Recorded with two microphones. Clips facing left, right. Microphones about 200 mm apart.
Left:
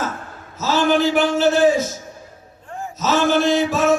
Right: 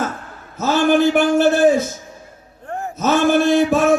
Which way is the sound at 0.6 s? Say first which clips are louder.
Right 3 dB; 55° right (ahead or behind).